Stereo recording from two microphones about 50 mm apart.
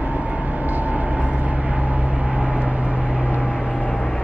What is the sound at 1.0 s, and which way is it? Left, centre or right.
Vehicle, centre.